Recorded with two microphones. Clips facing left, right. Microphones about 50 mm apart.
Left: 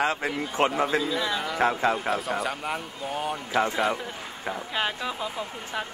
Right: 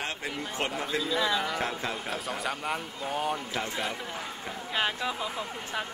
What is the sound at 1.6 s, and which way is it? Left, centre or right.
Speech, left.